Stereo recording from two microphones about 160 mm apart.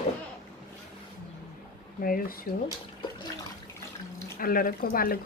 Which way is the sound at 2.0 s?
65° left (ahead or behind).